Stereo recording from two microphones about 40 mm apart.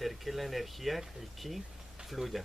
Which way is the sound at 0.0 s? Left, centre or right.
Centre.